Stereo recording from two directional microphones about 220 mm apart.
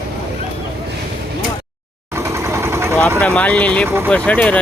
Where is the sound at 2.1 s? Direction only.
10° right (ahead or behind).